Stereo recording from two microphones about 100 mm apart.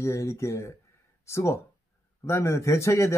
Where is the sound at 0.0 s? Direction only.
30° left (ahead or behind).